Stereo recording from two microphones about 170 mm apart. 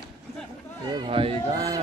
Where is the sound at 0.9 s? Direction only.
30° right (ahead or behind).